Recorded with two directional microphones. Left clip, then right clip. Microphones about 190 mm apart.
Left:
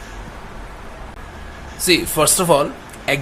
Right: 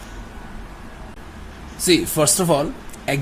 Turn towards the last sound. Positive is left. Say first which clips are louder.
# left 4 dB
turn(degrees=-20)  # may be behind; listen again after turning